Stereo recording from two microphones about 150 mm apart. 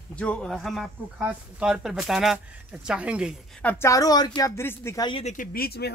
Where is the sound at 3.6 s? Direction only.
15° left (ahead or behind).